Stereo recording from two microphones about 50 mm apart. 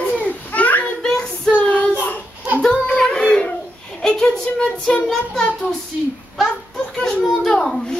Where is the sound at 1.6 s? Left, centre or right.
Left.